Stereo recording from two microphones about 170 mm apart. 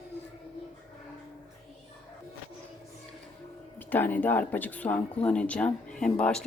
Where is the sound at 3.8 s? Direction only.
10° left (ahead or behind).